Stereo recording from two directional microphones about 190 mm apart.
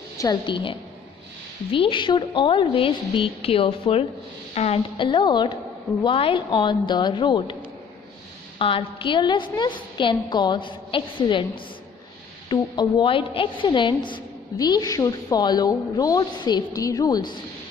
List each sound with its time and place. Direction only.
0.2 s a woman's voice: 25° left (ahead or behind)
8.5 s a woman's voice: 30° left (ahead or behind)